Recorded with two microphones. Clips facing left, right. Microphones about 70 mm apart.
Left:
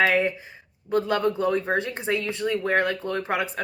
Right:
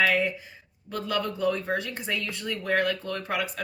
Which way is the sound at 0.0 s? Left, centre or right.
Left.